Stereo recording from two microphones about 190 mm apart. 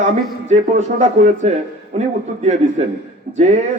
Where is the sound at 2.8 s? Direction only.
35° right (ahead or behind).